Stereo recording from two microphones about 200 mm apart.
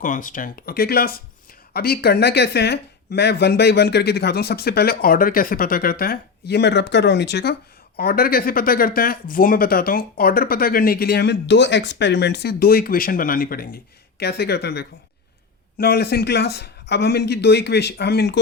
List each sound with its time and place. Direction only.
0.0 s speech: 40° left (ahead or behind)